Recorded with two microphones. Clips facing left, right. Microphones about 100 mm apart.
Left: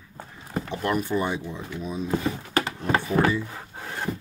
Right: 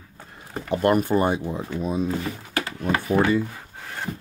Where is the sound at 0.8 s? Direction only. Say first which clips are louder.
Right 6 dB; 55° right (ahead or behind).